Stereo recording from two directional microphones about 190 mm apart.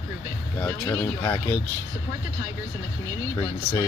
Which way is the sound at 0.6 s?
10° left (ahead or behind).